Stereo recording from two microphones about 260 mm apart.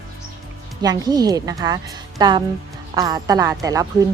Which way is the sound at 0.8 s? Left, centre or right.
Centre.